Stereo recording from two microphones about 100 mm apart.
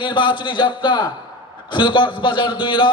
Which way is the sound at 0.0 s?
55° left (ahead or behind).